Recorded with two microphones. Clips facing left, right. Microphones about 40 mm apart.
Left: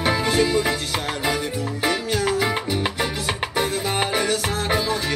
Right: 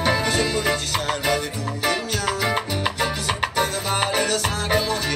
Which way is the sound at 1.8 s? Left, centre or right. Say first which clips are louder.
Left 1 dB; centre.